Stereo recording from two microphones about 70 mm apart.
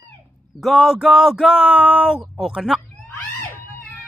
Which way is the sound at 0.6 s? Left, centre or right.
Centre.